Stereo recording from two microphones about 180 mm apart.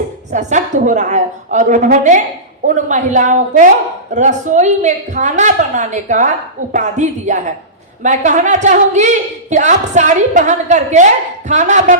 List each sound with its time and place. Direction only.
0.3 s a woman's voice: 40° right (ahead or behind)